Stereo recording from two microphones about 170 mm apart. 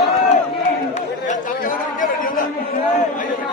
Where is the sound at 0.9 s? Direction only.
50° left (ahead or behind).